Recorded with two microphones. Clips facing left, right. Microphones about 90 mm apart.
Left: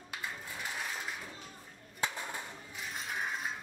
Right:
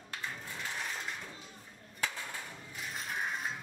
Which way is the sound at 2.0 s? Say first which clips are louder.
Left 2 dB; 20° left (ahead or behind).